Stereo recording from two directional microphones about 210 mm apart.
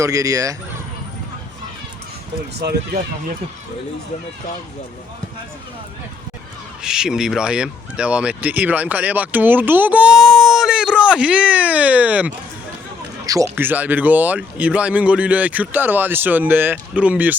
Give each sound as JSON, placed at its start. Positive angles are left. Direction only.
{"t": 0.0, "sound": "speech", "side_deg": -15}
{"t": 2.6, "sound": "speech", "side_deg": -50}
{"t": 6.8, "sound": "speech", "side_deg": -5}